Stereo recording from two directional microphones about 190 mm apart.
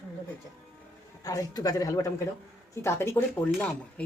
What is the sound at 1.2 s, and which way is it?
A woman's voice, 20° left (ahead or behind).